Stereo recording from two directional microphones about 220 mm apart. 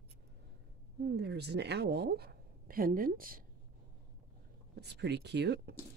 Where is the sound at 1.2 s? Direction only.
50° right (ahead or behind).